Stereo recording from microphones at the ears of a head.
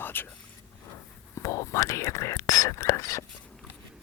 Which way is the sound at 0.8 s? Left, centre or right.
Left.